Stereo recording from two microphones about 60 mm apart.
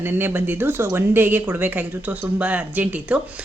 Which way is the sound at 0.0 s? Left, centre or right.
Right.